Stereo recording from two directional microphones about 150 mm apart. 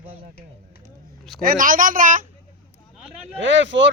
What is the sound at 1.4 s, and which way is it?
Speech, 70° right (ahead or behind).